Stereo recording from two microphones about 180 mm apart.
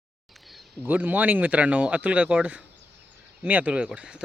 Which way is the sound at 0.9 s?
10° right (ahead or behind).